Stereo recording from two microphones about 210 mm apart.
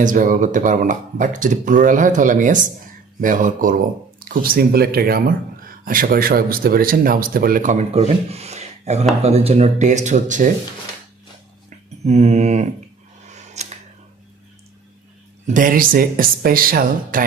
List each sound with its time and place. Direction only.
0.0 s speech: 40° right (ahead or behind)
12.0 s speech: 30° right (ahead or behind)
13.3 s a sound: 35° right (ahead or behind)
15.4 s speech: 40° right (ahead or behind)